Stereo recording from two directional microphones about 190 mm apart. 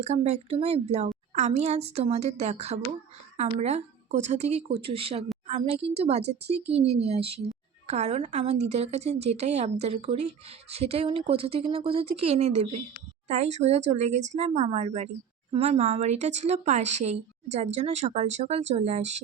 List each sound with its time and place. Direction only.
0.0 s a woman's voice: 35° right (ahead or behind)